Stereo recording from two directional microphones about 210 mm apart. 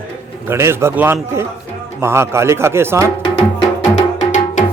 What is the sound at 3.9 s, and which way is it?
Music, 35° left (ahead or behind).